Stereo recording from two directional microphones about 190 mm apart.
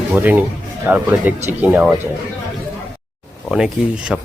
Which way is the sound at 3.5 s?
5° right (ahead or behind).